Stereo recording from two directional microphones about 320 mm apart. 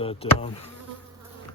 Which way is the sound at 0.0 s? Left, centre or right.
Centre.